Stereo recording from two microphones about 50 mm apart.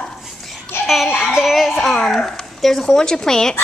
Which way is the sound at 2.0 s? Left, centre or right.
Centre.